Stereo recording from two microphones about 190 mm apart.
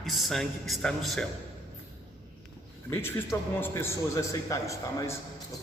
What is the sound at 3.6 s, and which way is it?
A man's voice, 15° left (ahead or behind).